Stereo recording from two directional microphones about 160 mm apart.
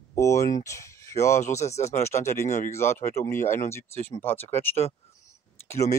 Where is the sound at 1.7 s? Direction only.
45° left (ahead or behind).